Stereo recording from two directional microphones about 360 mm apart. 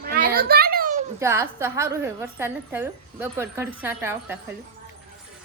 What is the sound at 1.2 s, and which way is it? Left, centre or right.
A woman's voice, centre.